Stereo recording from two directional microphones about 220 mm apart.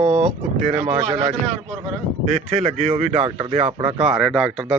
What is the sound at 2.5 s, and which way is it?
Speech, 30° right (ahead or behind).